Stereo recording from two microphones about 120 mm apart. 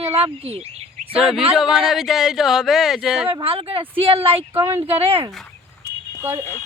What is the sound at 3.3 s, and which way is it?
Speech, 50° right (ahead or behind).